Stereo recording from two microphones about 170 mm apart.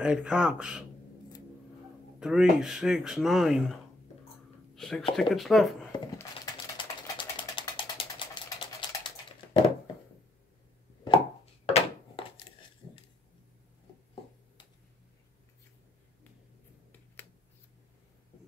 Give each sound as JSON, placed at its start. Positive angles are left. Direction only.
{"t": 0.0, "sound": "speech", "side_deg": -5}
{"t": 2.1, "sound": "speech", "side_deg": -5}
{"t": 4.7, "sound": "speech", "side_deg": 0}
{"t": 6.8, "sound": "ratchet", "side_deg": 30}
{"t": 8.5, "sound": "typing", "side_deg": 30}
{"t": 11.6, "sound": "a sound", "side_deg": 35}